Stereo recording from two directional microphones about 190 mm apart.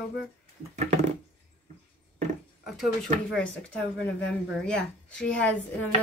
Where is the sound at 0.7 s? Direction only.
40° right (ahead or behind).